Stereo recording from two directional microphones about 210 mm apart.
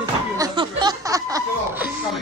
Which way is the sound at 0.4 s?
20° right (ahead or behind).